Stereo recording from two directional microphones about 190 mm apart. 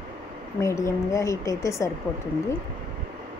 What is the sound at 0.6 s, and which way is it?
Speech, 15° left (ahead or behind).